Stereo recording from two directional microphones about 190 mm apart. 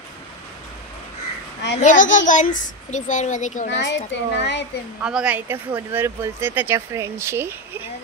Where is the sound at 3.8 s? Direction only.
70° left (ahead or behind).